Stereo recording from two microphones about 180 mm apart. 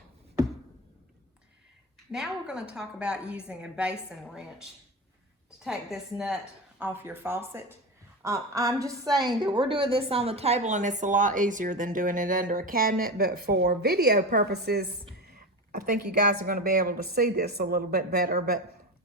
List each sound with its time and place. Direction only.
2.1 s a woman's voice: 5° right (ahead or behind); by 14.8 s 65° right (ahead or behind)
16.3 s speech: 50° right (ahead or behind)